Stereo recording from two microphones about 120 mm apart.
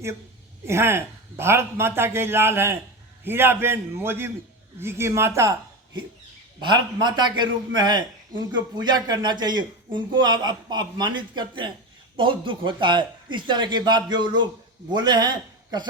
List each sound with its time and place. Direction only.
0.6 s a man's voice: 20° right (ahead or behind)
6.6 s speech: 40° right (ahead or behind)